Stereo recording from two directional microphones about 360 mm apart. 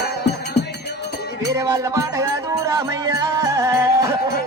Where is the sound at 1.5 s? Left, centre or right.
Centre.